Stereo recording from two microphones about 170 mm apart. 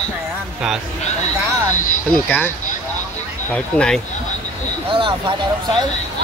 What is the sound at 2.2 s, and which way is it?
Speech, 10° left (ahead or behind).